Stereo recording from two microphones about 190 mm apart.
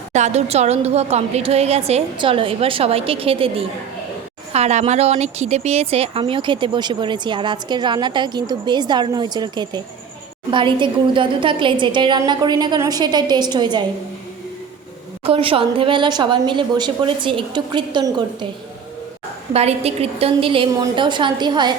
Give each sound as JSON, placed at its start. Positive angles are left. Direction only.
{"t": 0.1, "sound": "a woman's voice", "side_deg": -35}
{"t": 15.2, "sound": "speech", "side_deg": -30}
{"t": 19.5, "sound": "speech", "side_deg": -35}